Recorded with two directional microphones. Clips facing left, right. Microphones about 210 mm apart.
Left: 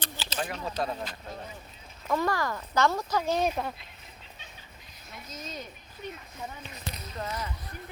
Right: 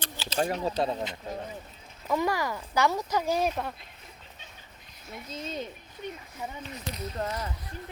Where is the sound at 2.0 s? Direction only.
10° right (ahead or behind).